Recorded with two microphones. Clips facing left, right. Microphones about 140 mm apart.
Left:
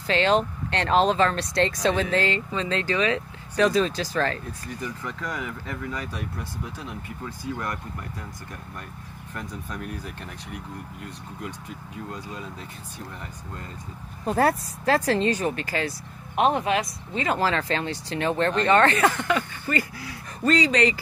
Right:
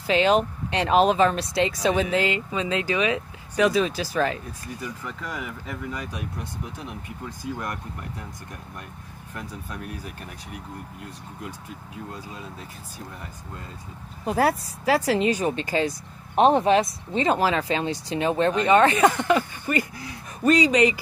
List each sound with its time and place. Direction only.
0.0 s speech: 15° right (ahead or behind)
9.3 s speech: 5° right (ahead or behind)
14.2 s speech: 5° right (ahead or behind); by 15.9 s 20° right (ahead or behind)
16.3 s speech: 30° right (ahead or behind)
17.4 s speech: 15° right (ahead or behind)